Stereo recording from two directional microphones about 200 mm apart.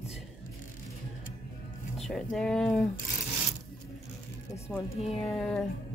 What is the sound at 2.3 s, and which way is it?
Speech, 5° left (ahead or behind).